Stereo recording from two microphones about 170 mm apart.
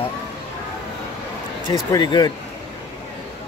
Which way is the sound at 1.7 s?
25° left (ahead or behind).